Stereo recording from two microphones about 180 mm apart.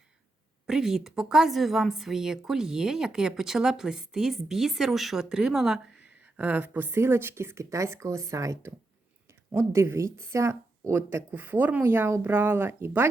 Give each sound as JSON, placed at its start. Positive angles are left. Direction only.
{"t": 0.7, "sound": "a woman's voice", "side_deg": -5}